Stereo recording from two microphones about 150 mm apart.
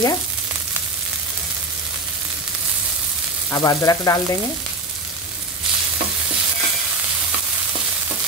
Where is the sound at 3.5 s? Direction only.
25° left (ahead or behind).